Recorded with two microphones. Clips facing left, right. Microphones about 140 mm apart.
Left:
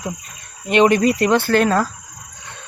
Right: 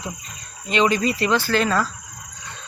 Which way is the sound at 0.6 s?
60° left (ahead or behind).